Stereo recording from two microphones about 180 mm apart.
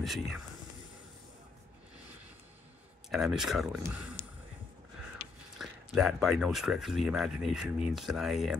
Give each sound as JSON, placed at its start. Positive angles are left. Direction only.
{"t": 0.0, "sound": "speech", "side_deg": 0}
{"t": 3.1, "sound": "speech", "side_deg": 0}
{"t": 4.2, "sound": "a sound", "side_deg": 30}
{"t": 5.6, "sound": "speech", "side_deg": 0}